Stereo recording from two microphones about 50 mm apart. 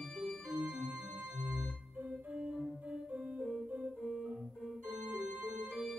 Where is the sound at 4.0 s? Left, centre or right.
Centre.